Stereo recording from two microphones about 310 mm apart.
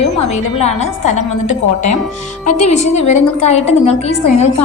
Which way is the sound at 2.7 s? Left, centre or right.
Left.